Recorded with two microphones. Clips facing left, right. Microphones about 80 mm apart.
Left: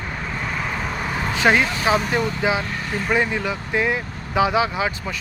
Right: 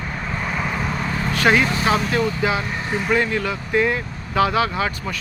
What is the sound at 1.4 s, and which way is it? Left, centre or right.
Speech, centre.